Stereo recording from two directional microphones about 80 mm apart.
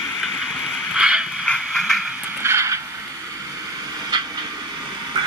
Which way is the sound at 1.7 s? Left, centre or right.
Centre.